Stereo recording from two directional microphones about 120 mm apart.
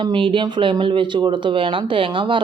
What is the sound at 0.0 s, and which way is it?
Speech, 45° right (ahead or behind).